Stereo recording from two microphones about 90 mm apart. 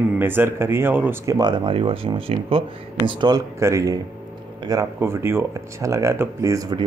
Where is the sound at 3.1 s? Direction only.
55° right (ahead or behind).